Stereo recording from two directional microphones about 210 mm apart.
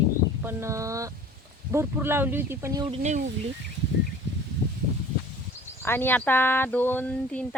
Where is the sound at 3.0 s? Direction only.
35° right (ahead or behind).